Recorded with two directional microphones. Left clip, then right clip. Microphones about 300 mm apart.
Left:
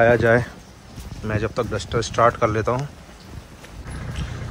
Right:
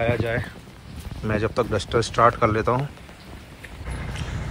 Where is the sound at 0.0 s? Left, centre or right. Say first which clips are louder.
Left 9 dB; left.